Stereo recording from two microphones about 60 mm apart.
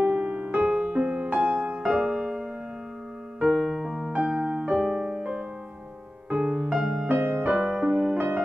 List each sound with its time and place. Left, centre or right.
0.0 s music: right
2.0 s music: centre
3.4 s music: centre
4.1 s music: right
7.1 s music: right